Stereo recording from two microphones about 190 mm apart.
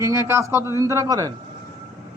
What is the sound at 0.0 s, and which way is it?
A man's voice, 15° right (ahead or behind).